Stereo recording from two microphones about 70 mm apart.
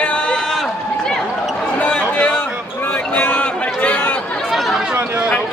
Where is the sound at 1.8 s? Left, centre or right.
Centre.